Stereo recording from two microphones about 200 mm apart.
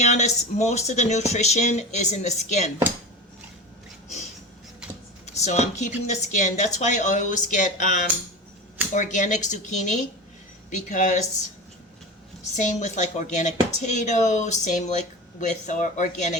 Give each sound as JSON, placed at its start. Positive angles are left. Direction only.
{"t": 0.0, "sound": "speech", "side_deg": 35}
{"t": 5.2, "sound": "a sound", "side_deg": 35}
{"t": 6.1, "sound": "speech", "side_deg": 35}
{"t": 9.0, "sound": "speech", "side_deg": 40}
{"t": 12.5, "sound": "speech", "side_deg": 35}